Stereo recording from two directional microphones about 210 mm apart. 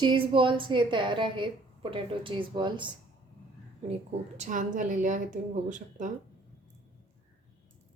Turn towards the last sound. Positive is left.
turn(degrees=-35)  # may be behind; listen again after turning